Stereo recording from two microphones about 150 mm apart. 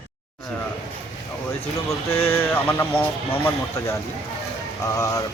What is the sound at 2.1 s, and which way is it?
Speech, 15° left (ahead or behind).